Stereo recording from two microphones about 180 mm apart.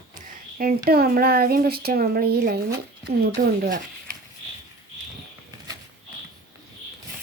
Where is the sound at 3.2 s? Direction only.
50° right (ahead or behind).